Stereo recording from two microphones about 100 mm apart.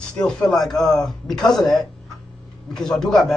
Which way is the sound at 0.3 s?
5° left (ahead or behind).